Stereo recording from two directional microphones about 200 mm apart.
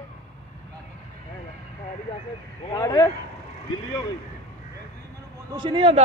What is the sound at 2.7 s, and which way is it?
Speech, 15° left (ahead or behind).